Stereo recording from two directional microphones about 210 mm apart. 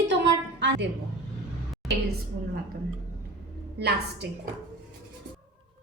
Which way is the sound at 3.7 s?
50° right (ahead or behind).